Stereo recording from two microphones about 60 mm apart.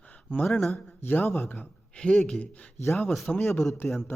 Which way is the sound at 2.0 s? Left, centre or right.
Centre.